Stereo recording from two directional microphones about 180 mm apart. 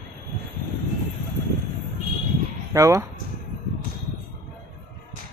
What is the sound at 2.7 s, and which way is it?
Speech, 20° right (ahead or behind).